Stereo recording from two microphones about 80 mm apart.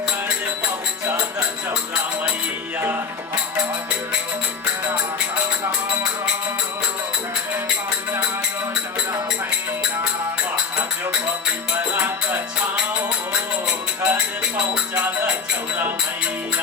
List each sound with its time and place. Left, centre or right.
11.8 s music: right
14.1 s music: right